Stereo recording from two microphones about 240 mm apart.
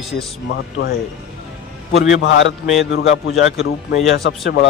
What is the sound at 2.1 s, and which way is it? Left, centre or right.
Speech, left.